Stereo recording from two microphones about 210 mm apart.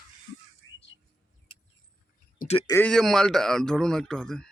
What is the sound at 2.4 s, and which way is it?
Speech, 30° left (ahead or behind).